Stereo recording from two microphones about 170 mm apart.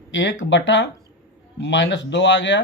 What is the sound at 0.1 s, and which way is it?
Speech, 90° left.